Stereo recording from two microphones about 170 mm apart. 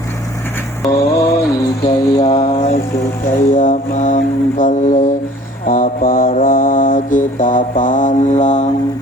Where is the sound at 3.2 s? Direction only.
45° left (ahead or behind).